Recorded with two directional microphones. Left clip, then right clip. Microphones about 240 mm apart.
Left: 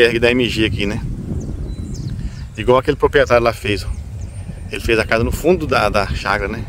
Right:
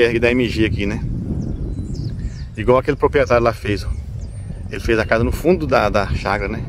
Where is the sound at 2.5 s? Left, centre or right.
Centre.